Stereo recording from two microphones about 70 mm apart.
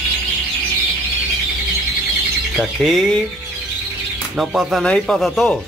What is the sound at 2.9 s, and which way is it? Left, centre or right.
Speech, centre.